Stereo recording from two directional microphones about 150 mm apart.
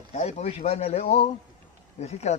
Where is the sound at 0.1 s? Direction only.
45° left (ahead or behind).